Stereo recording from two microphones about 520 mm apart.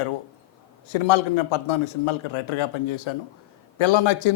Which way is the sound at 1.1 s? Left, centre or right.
Left.